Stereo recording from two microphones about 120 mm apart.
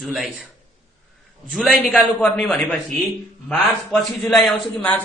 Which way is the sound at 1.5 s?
Centre (ahead or behind).